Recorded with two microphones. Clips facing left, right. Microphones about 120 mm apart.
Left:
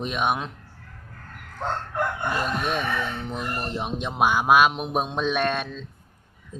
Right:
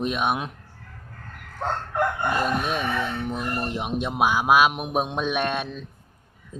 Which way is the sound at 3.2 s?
10° right (ahead or behind).